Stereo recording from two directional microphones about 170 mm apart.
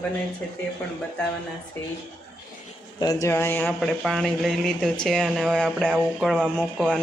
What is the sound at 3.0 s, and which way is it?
Speech, 20° left (ahead or behind).